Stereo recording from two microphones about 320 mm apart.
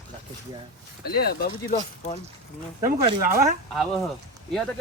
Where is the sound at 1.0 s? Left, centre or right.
Left.